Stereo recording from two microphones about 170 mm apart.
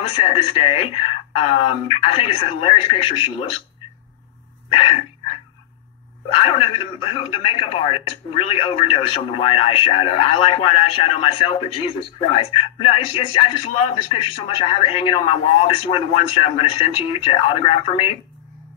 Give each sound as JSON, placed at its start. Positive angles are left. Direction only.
{"t": 0.1, "sound": "a man's voice", "side_deg": 35}
{"t": 4.6, "sound": "a man's voice", "side_deg": 35}
{"t": 6.3, "sound": "a man's voice", "side_deg": 35}